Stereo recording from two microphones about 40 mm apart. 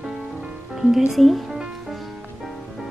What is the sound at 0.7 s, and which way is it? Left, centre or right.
Speech, centre.